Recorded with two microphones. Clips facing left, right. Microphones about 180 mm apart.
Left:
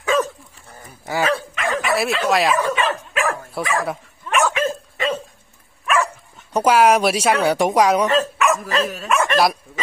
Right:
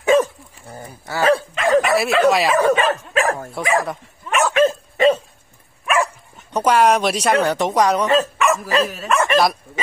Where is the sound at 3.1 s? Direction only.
35° right (ahead or behind).